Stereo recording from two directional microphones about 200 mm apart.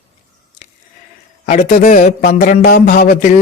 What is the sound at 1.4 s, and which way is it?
Speech, 35° left (ahead or behind).